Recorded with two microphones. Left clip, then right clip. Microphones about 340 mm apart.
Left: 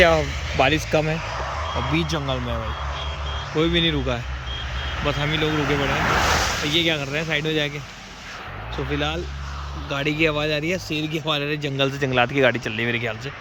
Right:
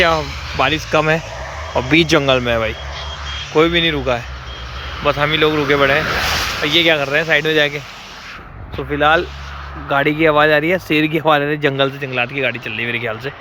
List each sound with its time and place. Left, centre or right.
0.5 s speech: centre
2.1 s speech: right
3.6 s speech: centre
6.1 s a sound: centre
6.7 s speech: centre
8.9 s speech: centre